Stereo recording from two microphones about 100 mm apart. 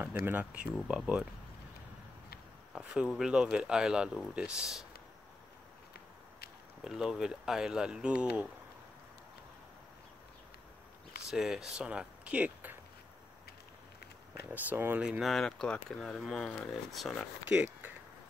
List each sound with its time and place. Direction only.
0.0 s speech: 20° right (ahead or behind)
2.8 s speech: 10° right (ahead or behind)
6.8 s speech: 5° right (ahead or behind)
11.2 s speech: 5° right (ahead or behind)
14.5 s speech: 20° right (ahead or behind)
15.0 s speech: 5° right (ahead or behind)
17.5 s speech: 15° right (ahead or behind)